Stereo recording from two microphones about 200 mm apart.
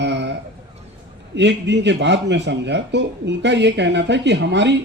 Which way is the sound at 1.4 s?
60° right (ahead or behind).